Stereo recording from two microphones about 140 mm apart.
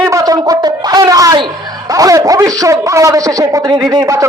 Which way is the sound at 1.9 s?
25° right (ahead or behind).